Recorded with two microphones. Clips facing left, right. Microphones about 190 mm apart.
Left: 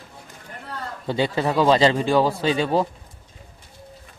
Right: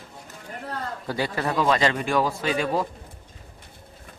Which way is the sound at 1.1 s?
25° left (ahead or behind).